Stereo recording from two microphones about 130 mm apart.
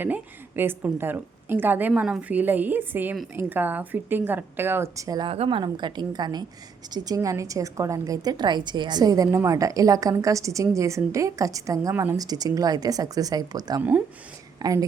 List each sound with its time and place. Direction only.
0.0 s a woman's voice: 15° right (ahead or behind)
5.3 s a woman's voice: 45° right (ahead or behind); by 14.8 s 25° right (ahead or behind)